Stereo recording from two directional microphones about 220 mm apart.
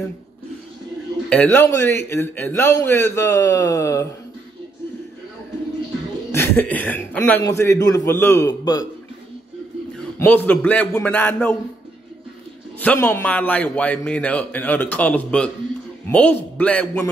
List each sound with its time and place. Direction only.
1.3 s a man's voice: 10° left (ahead or behind)
6.3 s a man's voice: 10° left (ahead or behind)
10.1 s a man's voice: 10° left (ahead or behind)
12.8 s a man's voice: 10° left (ahead or behind)